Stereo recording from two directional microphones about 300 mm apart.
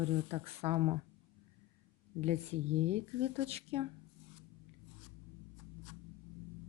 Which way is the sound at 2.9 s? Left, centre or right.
Centre.